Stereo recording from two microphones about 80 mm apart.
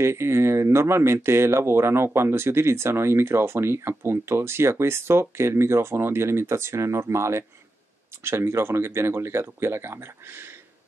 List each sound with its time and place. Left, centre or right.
0.0 s speech: right